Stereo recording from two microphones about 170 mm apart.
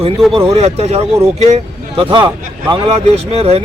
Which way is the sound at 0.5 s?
40° right (ahead or behind).